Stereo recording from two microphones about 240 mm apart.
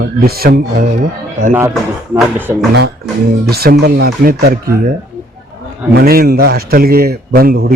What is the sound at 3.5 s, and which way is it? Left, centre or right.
Speech, right.